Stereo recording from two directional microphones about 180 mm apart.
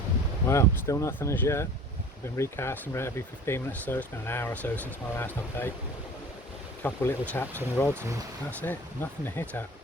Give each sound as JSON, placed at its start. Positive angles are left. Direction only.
{"t": 0.4, "sound": "speech", "side_deg": 15}
{"t": 6.8, "sound": "speech", "side_deg": 10}